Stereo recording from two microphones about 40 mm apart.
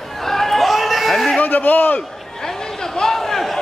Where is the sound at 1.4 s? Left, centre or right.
Left.